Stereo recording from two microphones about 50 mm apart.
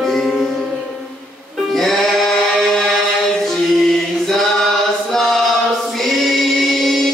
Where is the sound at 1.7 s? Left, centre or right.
Centre.